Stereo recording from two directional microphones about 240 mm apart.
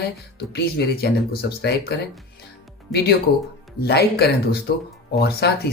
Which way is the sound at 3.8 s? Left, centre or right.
Left.